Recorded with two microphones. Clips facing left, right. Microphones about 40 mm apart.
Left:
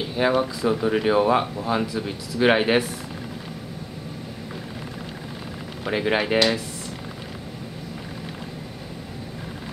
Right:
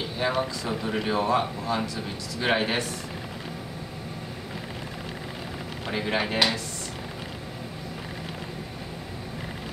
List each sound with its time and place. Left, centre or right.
0.3 s speech: centre
5.9 s speech: centre